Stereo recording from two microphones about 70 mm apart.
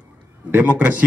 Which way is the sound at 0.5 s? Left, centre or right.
Right.